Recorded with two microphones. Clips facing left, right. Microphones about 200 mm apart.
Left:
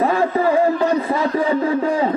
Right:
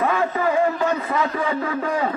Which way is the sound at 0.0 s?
35° left (ahead or behind).